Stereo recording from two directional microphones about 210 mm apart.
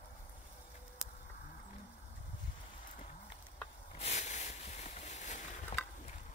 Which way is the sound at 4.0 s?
30° left (ahead or behind).